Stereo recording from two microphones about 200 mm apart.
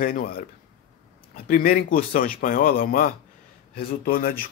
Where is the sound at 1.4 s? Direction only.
45° left (ahead or behind).